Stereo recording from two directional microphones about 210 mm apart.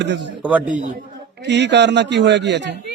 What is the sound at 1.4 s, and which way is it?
A man's voice, 55° right (ahead or behind).